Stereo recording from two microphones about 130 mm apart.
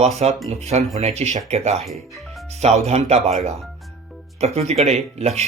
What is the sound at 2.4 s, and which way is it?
Speech, 55° right (ahead or behind).